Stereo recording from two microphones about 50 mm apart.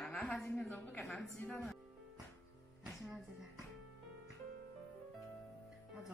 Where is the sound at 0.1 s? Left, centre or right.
Left.